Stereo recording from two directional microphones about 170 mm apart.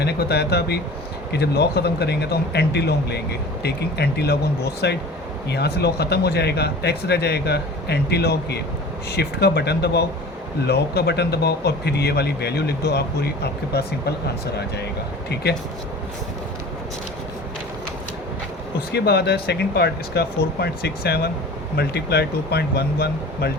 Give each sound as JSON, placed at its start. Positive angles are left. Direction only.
{"t": 0.0, "sound": "speech", "side_deg": 70}
{"t": 18.9, "sound": "speech", "side_deg": 70}